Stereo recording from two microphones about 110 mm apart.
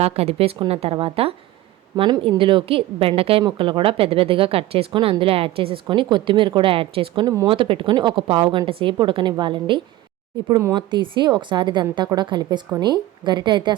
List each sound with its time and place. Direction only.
0.0 s a woman's voice: 70° right (ahead or behind)
2.0 s a woman's voice: 40° right (ahead or behind)
2.4 s a woman's voice: 50° right (ahead or behind)